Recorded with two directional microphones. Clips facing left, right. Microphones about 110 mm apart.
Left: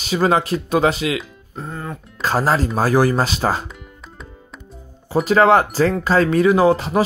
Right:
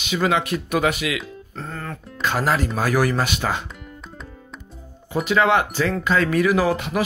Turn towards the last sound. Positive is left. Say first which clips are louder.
# left 5 dB
turn(degrees=30)  # may be behind; listen again after turning